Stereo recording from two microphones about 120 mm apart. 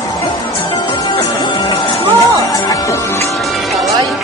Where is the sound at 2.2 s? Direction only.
25° left (ahead or behind).